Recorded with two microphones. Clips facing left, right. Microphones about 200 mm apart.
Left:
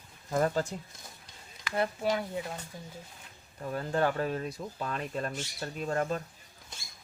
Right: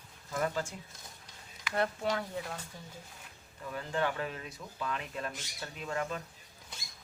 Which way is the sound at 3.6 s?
40° left (ahead or behind).